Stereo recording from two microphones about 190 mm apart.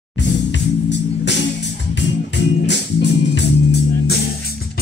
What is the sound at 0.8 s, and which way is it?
Music, 70° left (ahead or behind).